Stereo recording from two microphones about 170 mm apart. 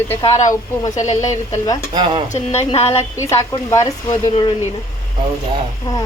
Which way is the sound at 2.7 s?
40° left (ahead or behind).